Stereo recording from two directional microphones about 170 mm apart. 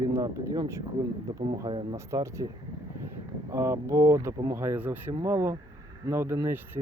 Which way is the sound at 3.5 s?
15° right (ahead or behind).